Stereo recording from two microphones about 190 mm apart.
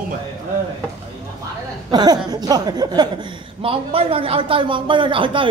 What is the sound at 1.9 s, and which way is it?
Speech, 20° right (ahead or behind).